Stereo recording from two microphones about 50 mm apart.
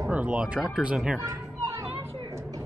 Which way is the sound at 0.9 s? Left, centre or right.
Centre.